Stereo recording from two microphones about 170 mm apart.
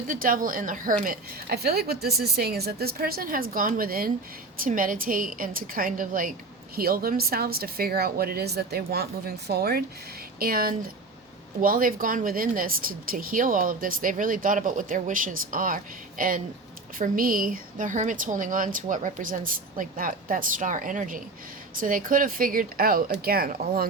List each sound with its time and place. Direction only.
0.1 s a woman's voice: 55° right (ahead or behind)